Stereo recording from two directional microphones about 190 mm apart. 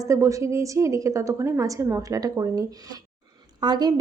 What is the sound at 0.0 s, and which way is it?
A woman's voice, 15° right (ahead or behind).